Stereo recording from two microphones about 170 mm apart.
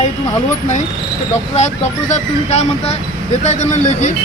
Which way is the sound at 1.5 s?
40° left (ahead or behind).